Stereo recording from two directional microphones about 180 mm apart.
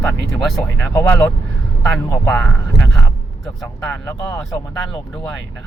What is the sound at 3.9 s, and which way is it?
Speech, 15° left (ahead or behind).